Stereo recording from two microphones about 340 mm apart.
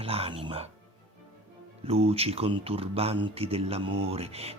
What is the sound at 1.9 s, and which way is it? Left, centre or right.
Speech, centre.